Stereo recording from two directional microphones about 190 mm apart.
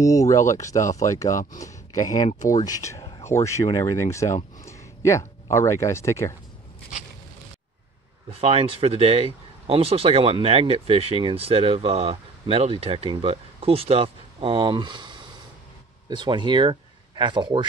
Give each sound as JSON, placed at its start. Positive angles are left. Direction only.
{"t": 0.0, "sound": "speech", "side_deg": 15}
{"t": 8.3, "sound": "speech", "side_deg": -30}